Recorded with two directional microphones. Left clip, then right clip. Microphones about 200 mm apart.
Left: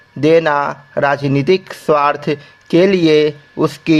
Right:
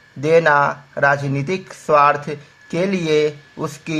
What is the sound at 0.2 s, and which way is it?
Speech, 40° left (ahead or behind).